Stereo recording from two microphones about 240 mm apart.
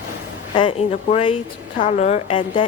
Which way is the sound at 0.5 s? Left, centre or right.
Left.